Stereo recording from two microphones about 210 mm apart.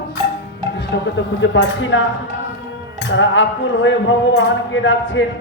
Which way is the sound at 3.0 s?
65° left (ahead or behind).